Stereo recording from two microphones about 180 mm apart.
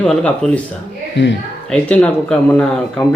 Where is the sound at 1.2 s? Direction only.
90° left.